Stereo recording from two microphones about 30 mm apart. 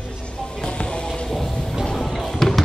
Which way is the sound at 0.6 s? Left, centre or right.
Left.